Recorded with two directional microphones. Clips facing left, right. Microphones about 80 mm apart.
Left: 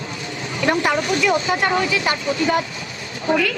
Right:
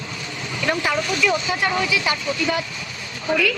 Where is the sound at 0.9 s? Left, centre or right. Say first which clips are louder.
Left 2 dB; left.